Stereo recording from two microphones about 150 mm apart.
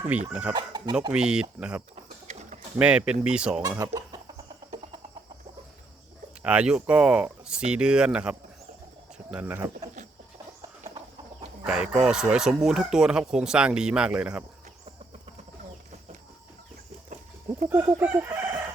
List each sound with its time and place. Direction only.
0.1 s speech: 10° right (ahead or behind)
0.5 s speech: 25° right (ahead or behind)
1.1 s speech: 5° right (ahead or behind)
2.2 s bird: 50° right (ahead or behind)
2.7 s speech: 5° right (ahead or behind)
3.6 s speech: 25° right (ahead or behind)
6.4 s speech: 5° right (ahead or behind)
11.6 s speech: 5° right (ahead or behind)
17.7 s speech: 15° right (ahead or behind)